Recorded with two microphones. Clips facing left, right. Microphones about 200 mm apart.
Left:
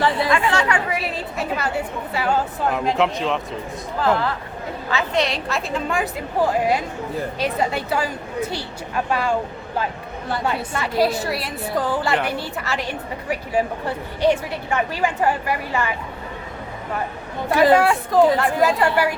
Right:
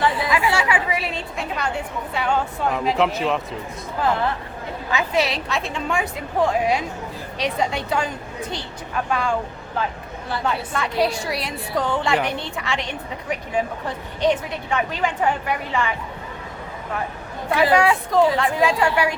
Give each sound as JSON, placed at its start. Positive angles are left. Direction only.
{"t": 0.3, "sound": "a woman's voice", "side_deg": -10}
{"t": 4.9, "sound": "a woman's voice", "side_deg": -15}
{"t": 5.2, "sound": "a woman's voice", "side_deg": 0}
{"t": 10.4, "sound": "a woman's voice", "side_deg": 5}
{"t": 17.5, "sound": "a woman's voice", "side_deg": 0}